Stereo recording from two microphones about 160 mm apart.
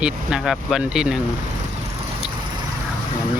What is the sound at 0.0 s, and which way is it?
Speech, 5° right (ahead or behind).